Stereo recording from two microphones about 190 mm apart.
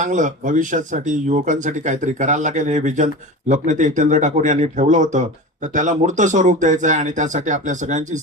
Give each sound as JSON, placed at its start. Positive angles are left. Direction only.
{"t": 0.0, "sound": "speech", "side_deg": -40}